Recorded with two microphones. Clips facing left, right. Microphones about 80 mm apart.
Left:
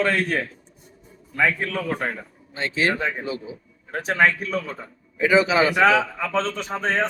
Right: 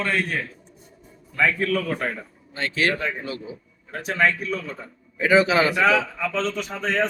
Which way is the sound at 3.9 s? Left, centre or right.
Left.